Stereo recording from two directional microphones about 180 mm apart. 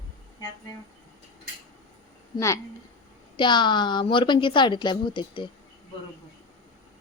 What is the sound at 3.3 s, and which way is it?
A woman's voice, 25° left (ahead or behind).